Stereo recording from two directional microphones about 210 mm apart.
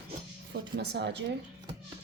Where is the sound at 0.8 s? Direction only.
55° right (ahead or behind).